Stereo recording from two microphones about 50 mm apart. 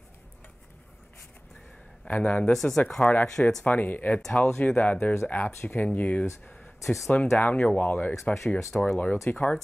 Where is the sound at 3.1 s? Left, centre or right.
Left.